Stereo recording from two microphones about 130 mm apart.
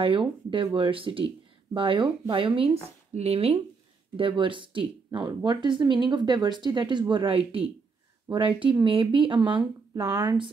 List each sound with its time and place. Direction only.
0.0 s speech: 40° right (ahead or behind)
4.2 s speech: 40° right (ahead or behind)